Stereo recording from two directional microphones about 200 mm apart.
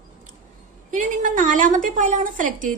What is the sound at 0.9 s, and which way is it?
A woman's voice, 40° right (ahead or behind).